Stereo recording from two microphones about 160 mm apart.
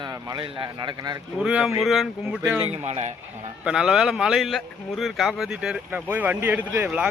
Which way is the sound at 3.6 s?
5° right (ahead or behind).